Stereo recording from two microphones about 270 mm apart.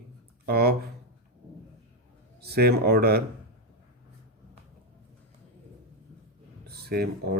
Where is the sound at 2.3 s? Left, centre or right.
Right.